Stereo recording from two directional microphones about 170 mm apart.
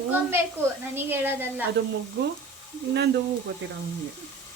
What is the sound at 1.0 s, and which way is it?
Speech, 10° right (ahead or behind).